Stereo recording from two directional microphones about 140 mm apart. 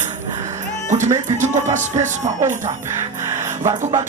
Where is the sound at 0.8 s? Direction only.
60° right (ahead or behind).